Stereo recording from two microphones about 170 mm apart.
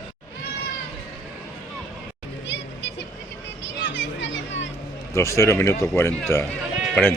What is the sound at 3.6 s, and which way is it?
Music, 90° left.